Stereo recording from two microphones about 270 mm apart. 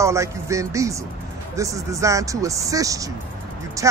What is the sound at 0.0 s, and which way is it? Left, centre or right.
Speech, centre.